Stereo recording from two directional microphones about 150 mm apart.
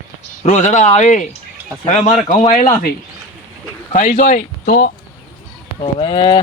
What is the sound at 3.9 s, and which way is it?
Speech, 60° left (ahead or behind).